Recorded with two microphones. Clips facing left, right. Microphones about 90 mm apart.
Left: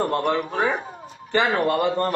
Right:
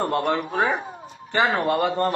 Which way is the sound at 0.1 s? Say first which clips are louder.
Even; 20° right (ahead or behind).